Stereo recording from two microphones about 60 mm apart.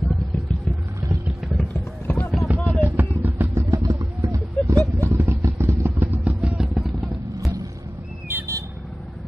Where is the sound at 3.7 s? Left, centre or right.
Right.